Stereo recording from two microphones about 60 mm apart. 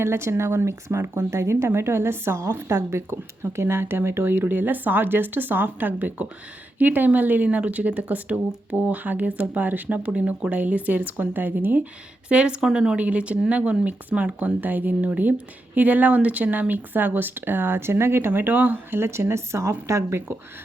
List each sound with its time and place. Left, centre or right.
0.0 s speech: right
12.3 s speech: centre; by 20.2 s right